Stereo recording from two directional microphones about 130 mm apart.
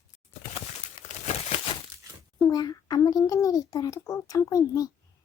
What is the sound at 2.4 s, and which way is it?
A child's voice, 30° left (ahead or behind).